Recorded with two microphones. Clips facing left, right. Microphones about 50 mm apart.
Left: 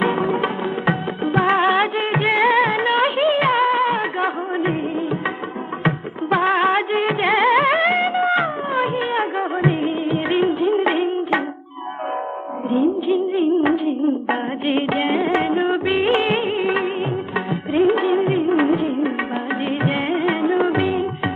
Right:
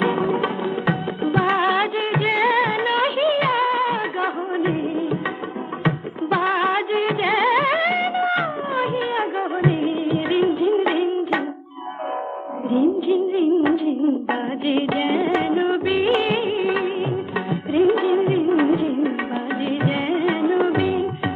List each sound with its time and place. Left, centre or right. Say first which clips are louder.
0.0 s music: left 1 dB; centre
6.3 s music: left 3 dB; left
13.3 s music: left 1 dB; left
15.4 s music of bollywood: left 1 dB; left
16.1 s music: left 1 dB; left
18.5 s music of bollywood: even; centre
19.8 s music: left 1 dB; centre
20.7 s music of bollywood: left 1 dB; left